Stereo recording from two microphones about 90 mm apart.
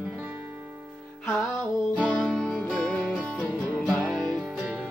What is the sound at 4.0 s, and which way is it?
Music, 5° right (ahead or behind).